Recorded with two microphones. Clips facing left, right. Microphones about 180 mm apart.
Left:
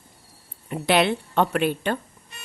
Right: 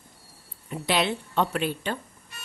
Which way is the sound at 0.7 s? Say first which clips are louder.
Left 5 dB; 60° left (ahead or behind).